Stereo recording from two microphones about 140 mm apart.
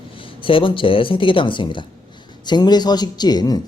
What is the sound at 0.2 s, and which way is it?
Speech, 40° left (ahead or behind).